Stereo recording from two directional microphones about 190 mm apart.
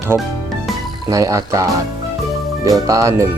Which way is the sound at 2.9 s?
15° right (ahead or behind).